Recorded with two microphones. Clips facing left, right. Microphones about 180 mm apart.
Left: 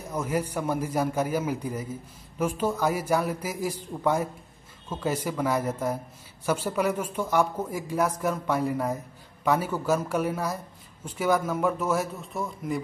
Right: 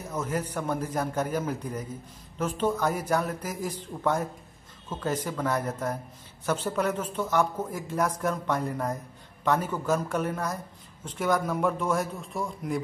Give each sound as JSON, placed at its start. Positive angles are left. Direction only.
{"t": 0.1, "sound": "a man's voice", "side_deg": 10}